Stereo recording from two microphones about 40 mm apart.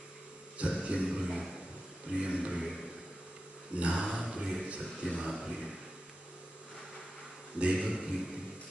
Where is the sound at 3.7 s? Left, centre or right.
Right.